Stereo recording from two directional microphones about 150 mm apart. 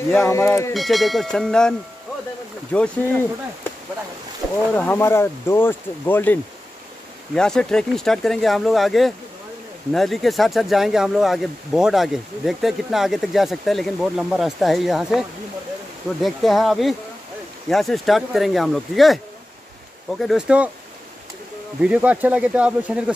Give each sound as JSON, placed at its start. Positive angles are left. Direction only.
{"t": 0.1, "sound": "speech", "side_deg": 15}
{"t": 0.7, "sound": "speech", "side_deg": 0}
{"t": 4.4, "sound": "boat", "side_deg": 0}
{"t": 4.7, "sound": "speech", "side_deg": 15}
{"t": 16.2, "sound": "speech", "side_deg": 0}
{"t": 20.2, "sound": "speech", "side_deg": -5}
{"t": 21.8, "sound": "speech", "side_deg": -10}